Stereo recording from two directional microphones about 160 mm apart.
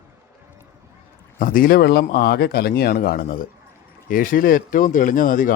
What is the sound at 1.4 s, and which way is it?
Speech, 60° left (ahead or behind).